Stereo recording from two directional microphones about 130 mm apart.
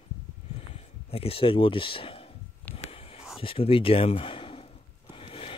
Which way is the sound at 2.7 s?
50° left (ahead or behind).